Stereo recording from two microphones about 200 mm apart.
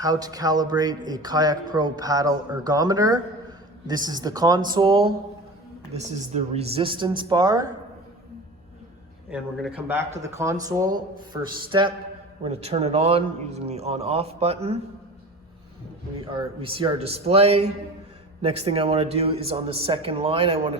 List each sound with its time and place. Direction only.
0.0 s speech: 20° right (ahead or behind)
9.8 s a man's voice: 10° right (ahead or behind); by 14.8 s 30° right (ahead or behind)
16.3 s speech: 25° right (ahead or behind)